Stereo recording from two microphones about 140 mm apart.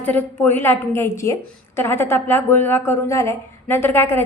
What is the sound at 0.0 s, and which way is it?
A woman's voice, 15° left (ahead or behind).